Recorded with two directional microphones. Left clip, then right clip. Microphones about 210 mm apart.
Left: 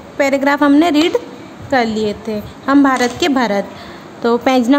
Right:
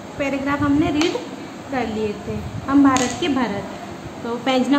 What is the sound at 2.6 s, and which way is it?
A woman's voice, 55° left (ahead or behind).